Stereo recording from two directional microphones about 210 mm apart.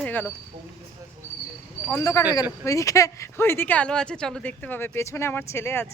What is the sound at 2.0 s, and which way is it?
Speech, 15° left (ahead or behind).